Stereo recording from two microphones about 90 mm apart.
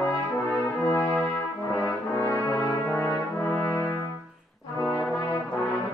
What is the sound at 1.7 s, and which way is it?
Brass instrument, 35° left (ahead or behind).